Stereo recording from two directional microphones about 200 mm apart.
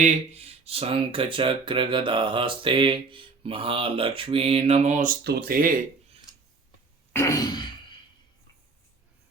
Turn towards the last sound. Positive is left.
turn(degrees=20)  # may be behind; listen again after turning